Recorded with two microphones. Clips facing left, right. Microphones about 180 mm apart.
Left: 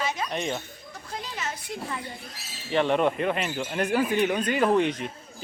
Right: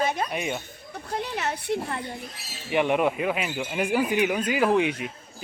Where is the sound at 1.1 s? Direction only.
65° right (ahead or behind).